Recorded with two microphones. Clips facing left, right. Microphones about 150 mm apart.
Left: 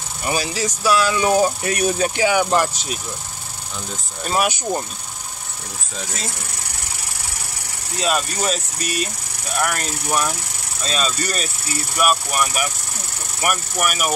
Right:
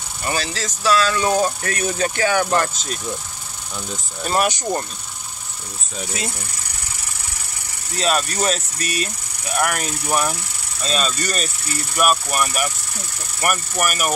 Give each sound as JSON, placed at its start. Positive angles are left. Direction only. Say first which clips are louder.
{"t": 0.2, "sound": "speech", "louder": "left 2 dB", "side_deg": 10}
{"t": 4.2, "sound": "speech", "louder": "right 1 dB", "side_deg": 0}
{"t": 8.0, "sound": "speech", "louder": "right 1 dB", "side_deg": 0}